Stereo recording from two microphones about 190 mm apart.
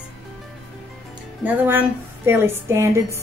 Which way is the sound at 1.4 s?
10° right (ahead or behind).